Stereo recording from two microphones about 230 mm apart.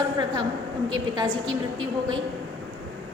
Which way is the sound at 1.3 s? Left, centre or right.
Centre.